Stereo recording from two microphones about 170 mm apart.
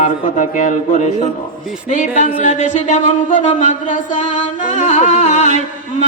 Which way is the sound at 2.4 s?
45° left (ahead or behind).